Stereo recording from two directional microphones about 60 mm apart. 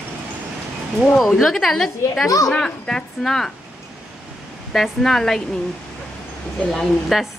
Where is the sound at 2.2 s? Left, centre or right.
Left.